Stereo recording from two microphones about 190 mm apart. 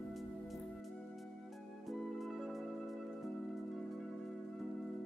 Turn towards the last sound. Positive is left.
turn(degrees=0)  # may be behind; listen again after turning